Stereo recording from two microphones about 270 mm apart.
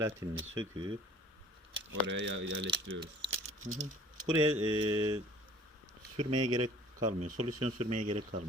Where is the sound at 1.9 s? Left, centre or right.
Right.